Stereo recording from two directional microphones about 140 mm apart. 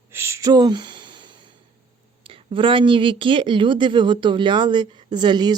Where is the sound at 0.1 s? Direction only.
20° right (ahead or behind).